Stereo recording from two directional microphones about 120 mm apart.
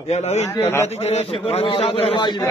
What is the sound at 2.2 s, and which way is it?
Speech, 40° left (ahead or behind).